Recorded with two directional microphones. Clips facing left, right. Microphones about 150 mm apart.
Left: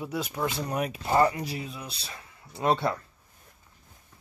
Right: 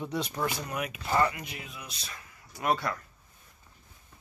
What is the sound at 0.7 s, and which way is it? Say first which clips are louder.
Speech: left 4 dB; 35° left (ahead or behind).